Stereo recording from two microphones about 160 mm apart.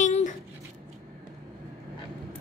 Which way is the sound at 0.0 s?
50° left (ahead or behind).